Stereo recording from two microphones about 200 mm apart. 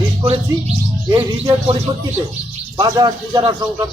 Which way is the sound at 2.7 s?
20° right (ahead or behind).